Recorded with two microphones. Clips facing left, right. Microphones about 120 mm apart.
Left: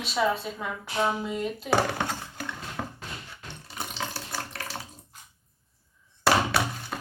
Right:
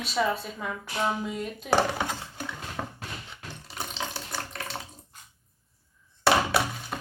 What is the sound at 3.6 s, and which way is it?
Ratchet, centre (ahead or behind).